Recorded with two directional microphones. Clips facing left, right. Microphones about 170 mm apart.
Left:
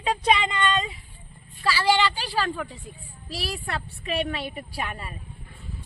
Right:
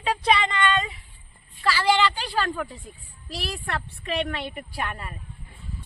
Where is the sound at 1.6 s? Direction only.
10° left (ahead or behind).